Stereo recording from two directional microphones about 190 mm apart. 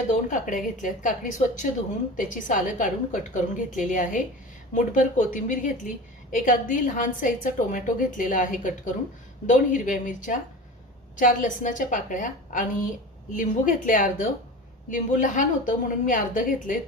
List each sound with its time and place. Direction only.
0.1 s a woman's voice: 40° left (ahead or behind)